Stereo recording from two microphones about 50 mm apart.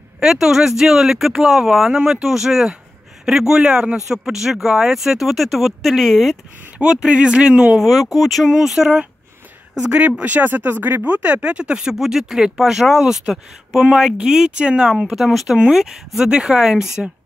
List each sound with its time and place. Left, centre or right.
0.2 s speech: centre
6.8 s speech: centre
7.8 s speech: centre
8.5 s speech: centre
9.8 s speech: right
11.9 s speech: centre
15.1 s speech: centre